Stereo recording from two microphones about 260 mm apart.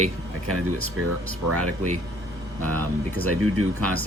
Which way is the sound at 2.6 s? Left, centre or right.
Centre.